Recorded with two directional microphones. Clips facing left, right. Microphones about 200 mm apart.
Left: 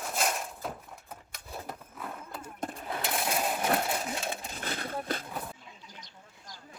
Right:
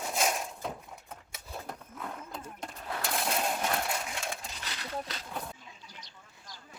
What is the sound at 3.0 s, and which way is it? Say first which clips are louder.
Sewing machine: left 1 dB; centre (ahead or behind).